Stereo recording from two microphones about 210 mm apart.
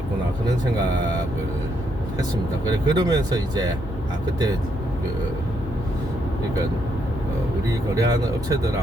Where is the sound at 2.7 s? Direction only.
20° right (ahead or behind).